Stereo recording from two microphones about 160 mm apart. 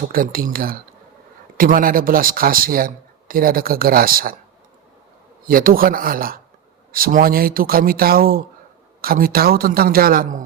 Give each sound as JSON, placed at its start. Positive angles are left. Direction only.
{"t": 0.1, "sound": "speech", "side_deg": -65}
{"t": 5.5, "sound": "a man's voice", "side_deg": -65}